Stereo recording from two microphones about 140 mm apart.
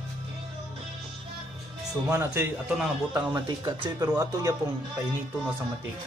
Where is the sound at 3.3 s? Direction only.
30° right (ahead or behind).